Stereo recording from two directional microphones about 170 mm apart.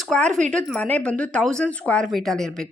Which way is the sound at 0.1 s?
5° left (ahead or behind).